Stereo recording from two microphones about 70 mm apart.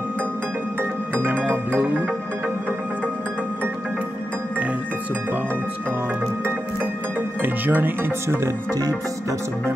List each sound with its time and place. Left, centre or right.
1.1 s music: right
7.4 s speech: right